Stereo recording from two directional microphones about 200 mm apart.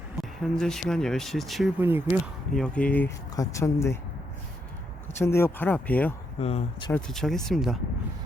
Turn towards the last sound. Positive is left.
turn(degrees=0)  # may be behind; listen again after turning